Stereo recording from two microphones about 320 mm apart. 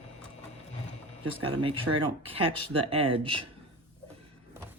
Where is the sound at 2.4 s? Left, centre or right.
Centre.